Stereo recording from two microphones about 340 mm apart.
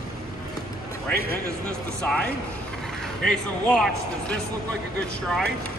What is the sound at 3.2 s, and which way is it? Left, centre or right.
A man's voice, centre.